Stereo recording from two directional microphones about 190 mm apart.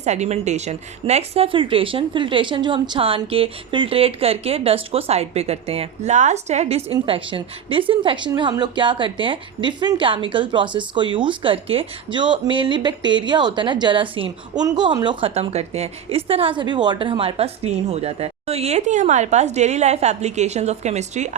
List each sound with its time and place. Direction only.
0.0 s a woman's voice: 35° right (ahead or behind)